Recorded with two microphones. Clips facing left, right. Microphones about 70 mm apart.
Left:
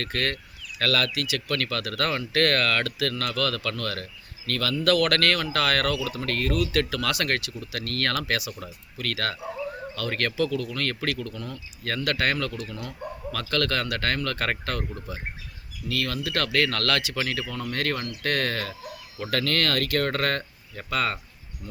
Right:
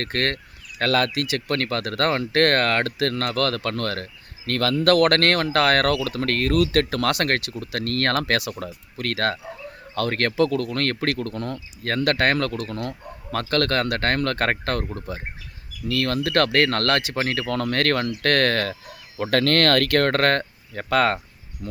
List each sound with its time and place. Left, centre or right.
0.0 s speech: right
17.4 s speech: right